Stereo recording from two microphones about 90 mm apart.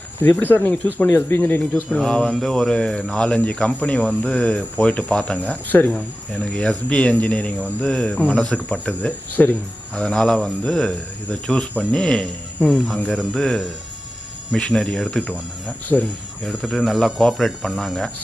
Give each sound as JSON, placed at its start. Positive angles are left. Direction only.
{"t": 0.2, "sound": "speech", "side_deg": 20}
{"t": 1.7, "sound": "speech", "side_deg": 10}
{"t": 16.5, "sound": "speech", "side_deg": 0}